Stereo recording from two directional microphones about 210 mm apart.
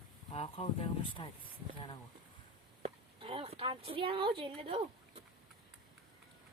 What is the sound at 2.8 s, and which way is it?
A woman's voice, 25° right (ahead or behind).